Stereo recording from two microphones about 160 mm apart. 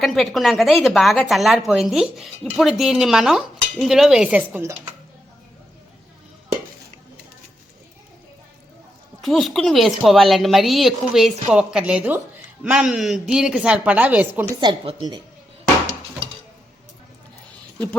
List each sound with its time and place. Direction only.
0.0 s speech: centre (ahead or behind)
9.2 s a woman's voice: centre (ahead or behind)
14.6 s a woman's voice: 30° right (ahead or behind)